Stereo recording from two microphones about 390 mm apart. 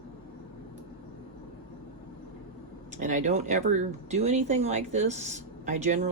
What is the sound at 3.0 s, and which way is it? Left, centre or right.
Speech, centre.